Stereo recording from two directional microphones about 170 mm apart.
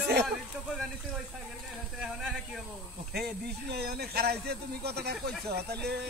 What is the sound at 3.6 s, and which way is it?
Speech, 70° right (ahead or behind).